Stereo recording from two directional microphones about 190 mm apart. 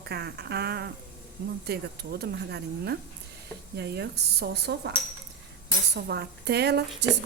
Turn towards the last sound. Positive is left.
turn(degrees=-65)  # may be behind; listen again after turning